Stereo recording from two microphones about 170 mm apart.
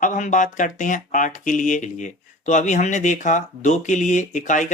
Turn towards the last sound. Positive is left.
turn(degrees=45)  # may be behind; listen again after turning